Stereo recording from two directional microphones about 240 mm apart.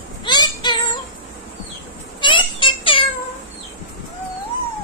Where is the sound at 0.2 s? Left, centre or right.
Centre.